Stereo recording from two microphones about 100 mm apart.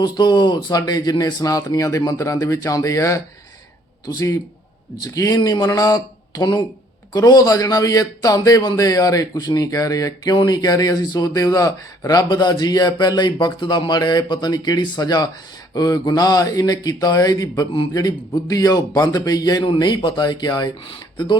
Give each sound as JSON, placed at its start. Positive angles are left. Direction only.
{"t": 0.0, "sound": "speech", "side_deg": 45}
{"t": 19.6, "sound": "speech", "side_deg": 55}
{"t": 20.8, "sound": "speech", "side_deg": 55}